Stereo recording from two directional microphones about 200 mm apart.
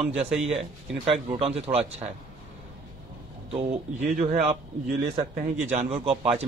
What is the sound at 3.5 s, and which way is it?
A man's voice, 35° right (ahead or behind).